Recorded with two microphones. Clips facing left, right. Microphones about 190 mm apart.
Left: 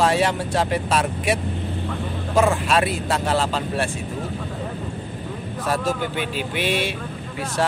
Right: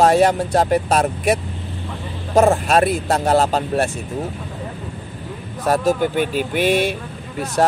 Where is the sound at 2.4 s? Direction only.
40° right (ahead or behind).